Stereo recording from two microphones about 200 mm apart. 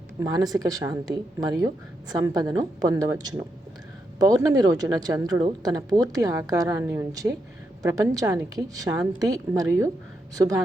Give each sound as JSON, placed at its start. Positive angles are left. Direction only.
{"t": 0.2, "sound": "a woman's voice", "side_deg": -20}